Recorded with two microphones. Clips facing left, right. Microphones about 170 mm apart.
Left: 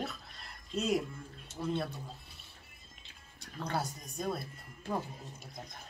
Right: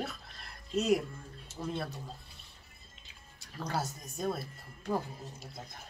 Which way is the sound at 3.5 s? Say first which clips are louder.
Even; centre (ahead or behind).